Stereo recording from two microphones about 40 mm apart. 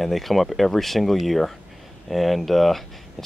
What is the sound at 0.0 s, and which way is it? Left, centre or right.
Speech, centre.